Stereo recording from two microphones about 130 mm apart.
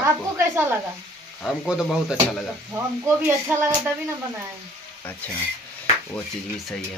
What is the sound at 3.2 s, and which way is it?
Speech, 20° right (ahead or behind).